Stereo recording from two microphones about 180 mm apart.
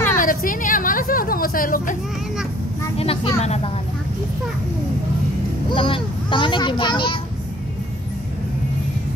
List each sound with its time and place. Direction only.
0.1 s a sound: 50° left (ahead or behind)
3.0 s speech: 35° left (ahead or behind)
5.7 s a child's voice: 30° left (ahead or behind)